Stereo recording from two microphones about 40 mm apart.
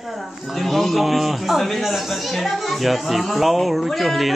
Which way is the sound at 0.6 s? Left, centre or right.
Centre.